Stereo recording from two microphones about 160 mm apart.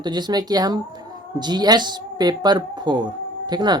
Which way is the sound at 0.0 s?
25° right (ahead or behind).